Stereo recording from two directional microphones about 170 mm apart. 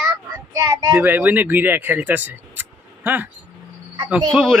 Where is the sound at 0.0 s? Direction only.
20° right (ahead or behind).